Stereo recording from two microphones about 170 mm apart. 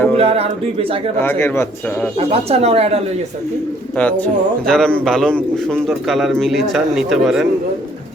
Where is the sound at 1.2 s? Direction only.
15° left (ahead or behind).